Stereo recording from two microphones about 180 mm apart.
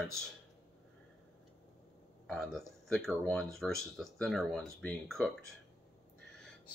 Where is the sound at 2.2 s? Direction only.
5° left (ahead or behind).